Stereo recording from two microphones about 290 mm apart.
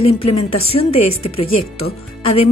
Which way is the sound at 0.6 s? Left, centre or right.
Centre.